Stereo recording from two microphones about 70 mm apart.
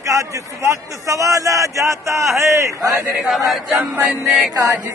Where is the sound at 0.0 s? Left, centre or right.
Right.